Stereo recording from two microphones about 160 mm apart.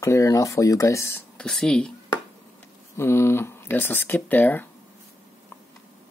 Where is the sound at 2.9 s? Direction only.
15° left (ahead or behind).